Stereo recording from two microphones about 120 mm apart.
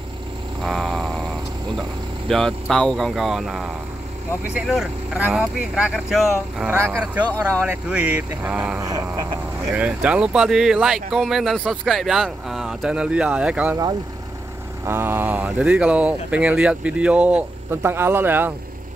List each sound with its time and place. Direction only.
0.6 s frog: centre (ahead or behind)
1.8 s speech: 5° left (ahead or behind)
6.7 s a sound: 20° right (ahead or behind)
7.6 s speech: 10° right (ahead or behind)
8.8 s a sound: 30° right (ahead or behind)
9.8 s speech: 10° right (ahead or behind)
14.9 s speech: 20° right (ahead or behind)